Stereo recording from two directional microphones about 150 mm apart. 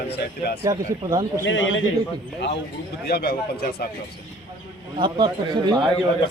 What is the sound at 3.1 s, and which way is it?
Speech, 90° left.